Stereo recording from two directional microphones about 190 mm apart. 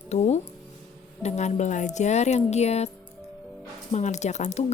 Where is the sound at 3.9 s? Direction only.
40° left (ahead or behind).